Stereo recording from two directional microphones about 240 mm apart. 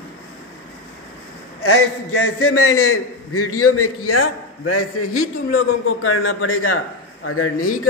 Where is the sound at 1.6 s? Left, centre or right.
Left.